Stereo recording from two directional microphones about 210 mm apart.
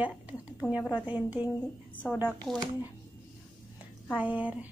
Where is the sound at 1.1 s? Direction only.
5° right (ahead or behind).